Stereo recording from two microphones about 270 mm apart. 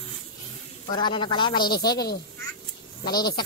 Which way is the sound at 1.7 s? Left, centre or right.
Left.